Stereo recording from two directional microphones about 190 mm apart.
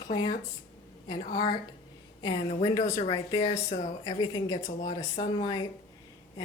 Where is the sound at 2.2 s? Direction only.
20° left (ahead or behind).